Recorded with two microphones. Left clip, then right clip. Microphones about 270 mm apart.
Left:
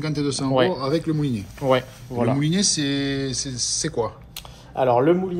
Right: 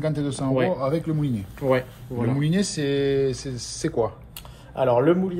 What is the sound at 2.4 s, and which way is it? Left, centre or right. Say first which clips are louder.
Speech: left 3 dB; centre.